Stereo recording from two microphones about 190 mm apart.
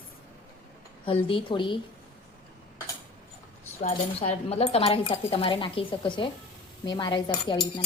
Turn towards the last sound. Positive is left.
turn(degrees=25)  # may be behind; listen again after turning